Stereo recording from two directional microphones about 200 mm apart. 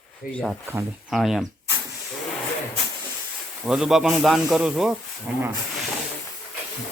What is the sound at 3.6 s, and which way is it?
A man's voice, 5° right (ahead or behind).